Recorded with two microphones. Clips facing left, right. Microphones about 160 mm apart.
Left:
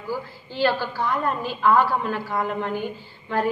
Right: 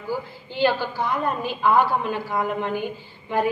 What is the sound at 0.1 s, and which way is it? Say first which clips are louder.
A woman's voice: right 1 dB; 15° right (ahead or behind).